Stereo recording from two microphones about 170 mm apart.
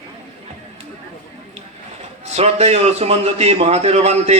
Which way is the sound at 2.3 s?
40° right (ahead or behind).